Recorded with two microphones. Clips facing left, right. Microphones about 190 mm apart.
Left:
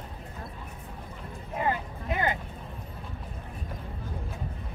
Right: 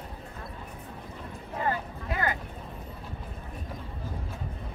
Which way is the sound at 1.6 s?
20° left (ahead or behind).